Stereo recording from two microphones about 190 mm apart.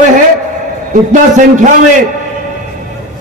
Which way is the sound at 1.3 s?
40° right (ahead or behind).